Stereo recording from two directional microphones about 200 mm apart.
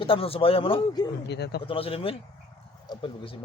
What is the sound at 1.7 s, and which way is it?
A man's voice, 30° left (ahead or behind).